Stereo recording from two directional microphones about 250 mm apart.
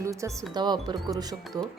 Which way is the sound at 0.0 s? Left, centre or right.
Centre.